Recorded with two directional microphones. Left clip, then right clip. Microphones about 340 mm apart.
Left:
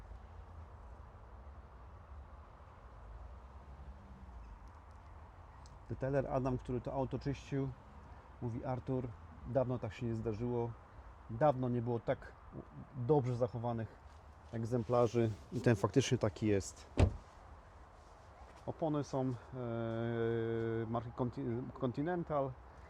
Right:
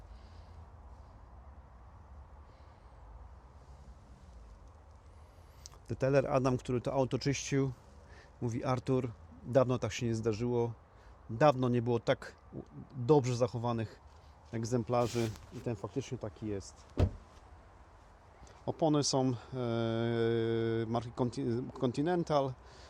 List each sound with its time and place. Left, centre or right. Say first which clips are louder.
5.6 s speech: right 8 dB; centre
15.6 s speech: left 7 dB; centre
18.6 s speech: right 7 dB; right